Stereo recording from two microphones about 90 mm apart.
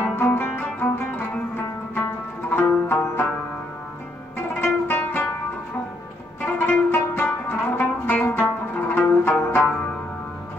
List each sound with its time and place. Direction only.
0.1 s music: 20° left (ahead or behind)
2.5 s music: 25° left (ahead or behind)
4.6 s music: 20° left (ahead or behind)
6.4 s music: 15° left (ahead or behind)